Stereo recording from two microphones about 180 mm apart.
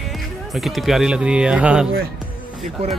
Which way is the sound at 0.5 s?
Centre (ahead or behind).